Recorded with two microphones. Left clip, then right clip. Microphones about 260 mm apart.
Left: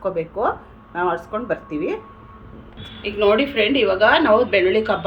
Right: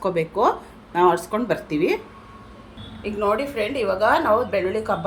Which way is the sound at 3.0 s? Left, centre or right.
Right.